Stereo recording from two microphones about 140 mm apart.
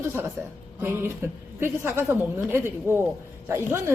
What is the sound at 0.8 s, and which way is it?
A woman's voice, 15° right (ahead or behind).